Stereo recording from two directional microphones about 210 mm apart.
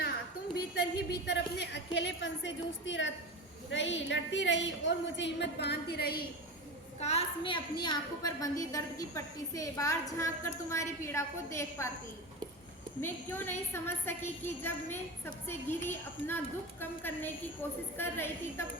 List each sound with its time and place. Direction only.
1.3 s a woman's voice: 55° left (ahead or behind)
7.0 s a woman's voice: 30° left (ahead or behind); by 11.9 s 15° left (ahead or behind)
13.0 s a woman's voice: 10° left (ahead or behind)